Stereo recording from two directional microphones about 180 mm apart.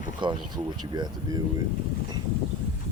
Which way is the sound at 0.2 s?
25° right (ahead or behind).